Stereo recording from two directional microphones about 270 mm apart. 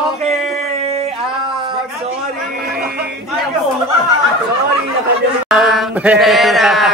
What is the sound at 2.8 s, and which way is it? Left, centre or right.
Music, right.